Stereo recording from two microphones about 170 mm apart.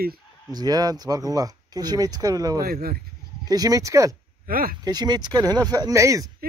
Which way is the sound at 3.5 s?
20° right (ahead or behind).